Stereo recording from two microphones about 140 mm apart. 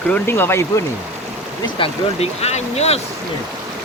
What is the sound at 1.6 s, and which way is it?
Speech, 45° left (ahead or behind).